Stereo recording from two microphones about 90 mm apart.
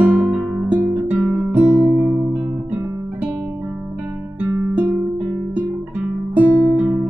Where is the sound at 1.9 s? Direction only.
20° right (ahead or behind).